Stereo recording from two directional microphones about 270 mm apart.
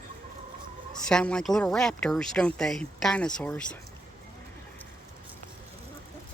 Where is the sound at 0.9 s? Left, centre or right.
Centre.